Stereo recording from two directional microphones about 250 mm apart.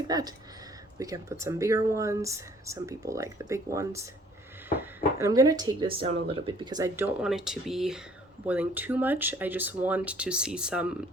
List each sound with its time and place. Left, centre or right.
0.1 s speech: centre
5.2 s speech: centre